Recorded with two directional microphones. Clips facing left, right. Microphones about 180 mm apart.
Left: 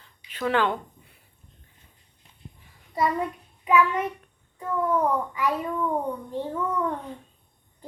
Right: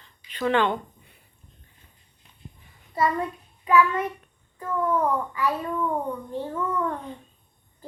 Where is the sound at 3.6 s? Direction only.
15° left (ahead or behind).